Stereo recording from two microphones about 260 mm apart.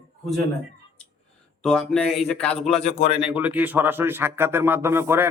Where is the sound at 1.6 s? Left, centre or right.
Centre.